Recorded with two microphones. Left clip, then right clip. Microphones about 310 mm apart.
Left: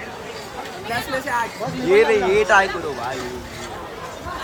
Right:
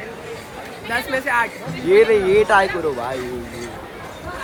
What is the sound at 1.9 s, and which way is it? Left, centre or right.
Speech, centre.